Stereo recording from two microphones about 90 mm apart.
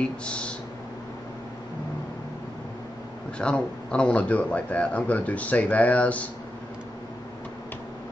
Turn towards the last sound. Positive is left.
turn(degrees=15)  # may be behind; listen again after turning